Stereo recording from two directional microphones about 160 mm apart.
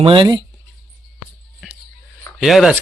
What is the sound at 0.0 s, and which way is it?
Speech, 30° right (ahead or behind).